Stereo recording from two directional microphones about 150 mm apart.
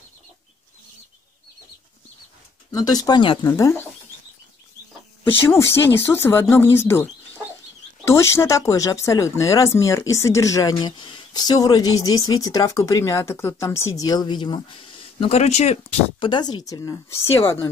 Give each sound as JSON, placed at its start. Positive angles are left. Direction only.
{"t": 2.7, "sound": "speech", "side_deg": 25}
{"t": 5.5, "sound": "speech", "side_deg": 15}